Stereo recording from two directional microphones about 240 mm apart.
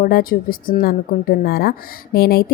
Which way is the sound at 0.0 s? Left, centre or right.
Left.